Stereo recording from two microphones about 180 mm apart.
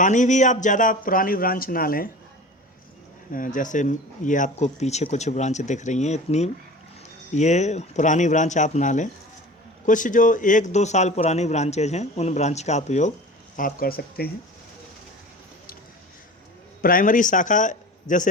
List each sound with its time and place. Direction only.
0.0 s a man's voice: 45° left (ahead or behind)
3.3 s a man's voice: 45° left (ahead or behind)
13.6 s speech: 50° left (ahead or behind)
16.8 s a man's voice: 50° left (ahead or behind)